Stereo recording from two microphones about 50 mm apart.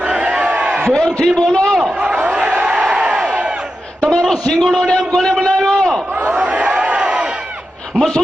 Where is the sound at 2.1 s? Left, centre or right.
Right.